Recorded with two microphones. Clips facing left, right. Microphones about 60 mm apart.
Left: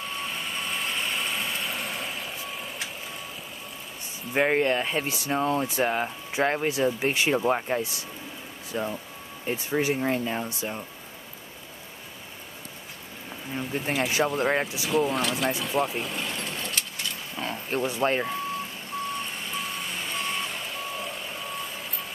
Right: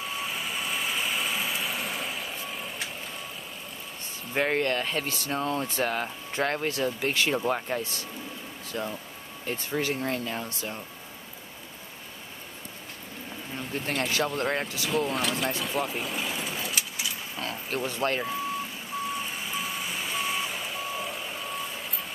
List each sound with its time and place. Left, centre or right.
0.0 s vehicle: centre
4.3 s speech: centre
13.5 s speech: centre
14.9 s speech: centre
17.4 s speech: centre
18.2 s vehicle: centre